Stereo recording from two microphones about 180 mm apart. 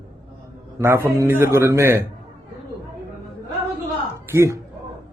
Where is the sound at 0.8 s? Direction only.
15° right (ahead or behind).